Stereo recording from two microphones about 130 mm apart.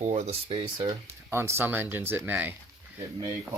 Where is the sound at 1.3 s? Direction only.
20° right (ahead or behind).